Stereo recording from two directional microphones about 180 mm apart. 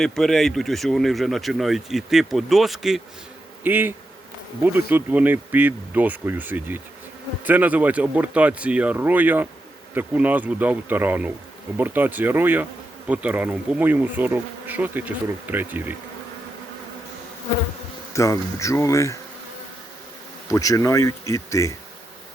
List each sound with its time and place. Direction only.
0.0 s speech: centre (ahead or behind)
3.6 s bee: 10° right (ahead or behind)
18.1 s speech: 15° left (ahead or behind)
20.5 s speech: 20° left (ahead or behind)